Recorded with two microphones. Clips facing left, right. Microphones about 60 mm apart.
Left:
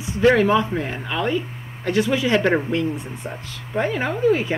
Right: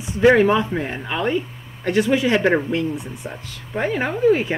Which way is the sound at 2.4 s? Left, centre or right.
Centre.